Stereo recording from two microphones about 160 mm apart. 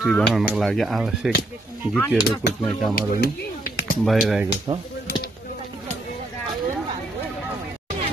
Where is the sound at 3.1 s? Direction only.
70° left (ahead or behind).